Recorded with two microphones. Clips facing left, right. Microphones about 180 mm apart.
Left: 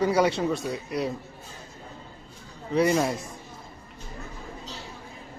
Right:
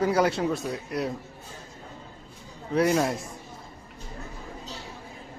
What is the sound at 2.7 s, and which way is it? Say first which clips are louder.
Speech: even; centre (ahead or behind).